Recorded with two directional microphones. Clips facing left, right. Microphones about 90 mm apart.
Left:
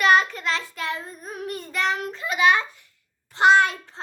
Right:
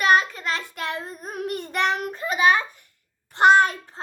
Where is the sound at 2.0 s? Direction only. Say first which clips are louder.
Left 2 dB; 45° right (ahead or behind).